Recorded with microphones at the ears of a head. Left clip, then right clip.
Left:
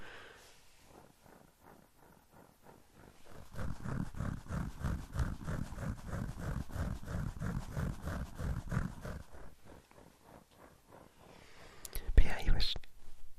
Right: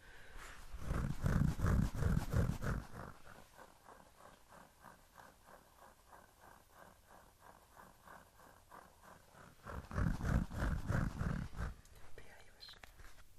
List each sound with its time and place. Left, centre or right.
0.9 s wild animals: right
3.6 s wild animals: left
9.6 s roaring cats: right
11.9 s whispering: left